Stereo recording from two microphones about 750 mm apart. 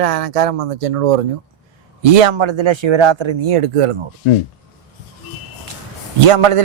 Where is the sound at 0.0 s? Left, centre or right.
Right.